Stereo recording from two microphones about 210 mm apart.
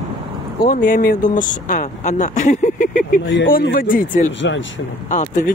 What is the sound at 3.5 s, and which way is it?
Speech, 45° left (ahead or behind).